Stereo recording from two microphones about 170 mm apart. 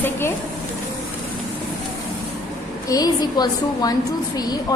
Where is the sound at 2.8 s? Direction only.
20° left (ahead or behind).